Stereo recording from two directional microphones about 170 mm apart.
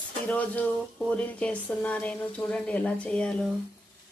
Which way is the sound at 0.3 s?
10° left (ahead or behind).